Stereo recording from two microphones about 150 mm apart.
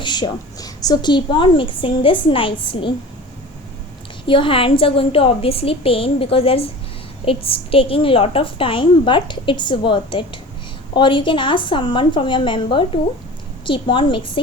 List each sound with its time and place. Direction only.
0.0 s a woman's voice: 30° left (ahead or behind)
4.3 s a woman's voice: 35° left (ahead or behind)